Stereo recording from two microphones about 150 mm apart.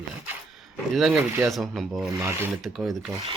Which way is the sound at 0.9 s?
Centre (ahead or behind).